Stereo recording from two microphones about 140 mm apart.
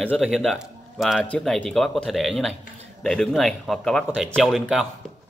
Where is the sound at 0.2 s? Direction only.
Centre (ahead or behind).